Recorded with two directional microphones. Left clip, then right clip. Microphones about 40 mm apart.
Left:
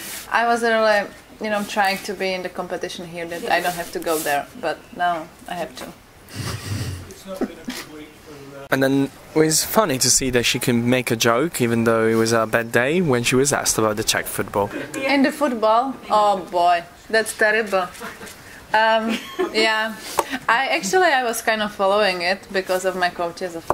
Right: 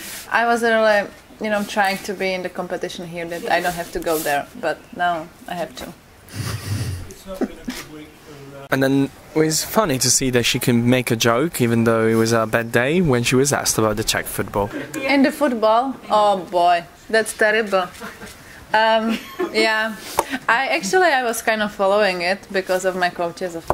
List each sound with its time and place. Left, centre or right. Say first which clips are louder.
0.3 s speech: right 1 dB; centre
3.3 s speech: right 1 dB; centre
4.4 s speech: right 1 dB; centre
6.3 s snort: even; centre
7.3 s speech: right 1 dB; centre
7.7 s a sound: even; right
8.6 s speech: even; centre
9.3 s speech: left 1 dB; centre
9.8 s speech: even; centre
15.0 s speech: right 2 dB; centre
19.0 s speech: even; centre
19.5 s speech: right 1 dB; centre